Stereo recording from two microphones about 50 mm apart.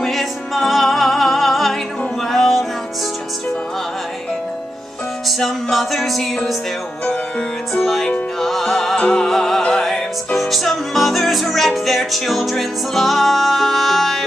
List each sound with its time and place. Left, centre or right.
0.0 s music: centre
5.4 s music: centre
7.1 s music: centre
7.8 s music: centre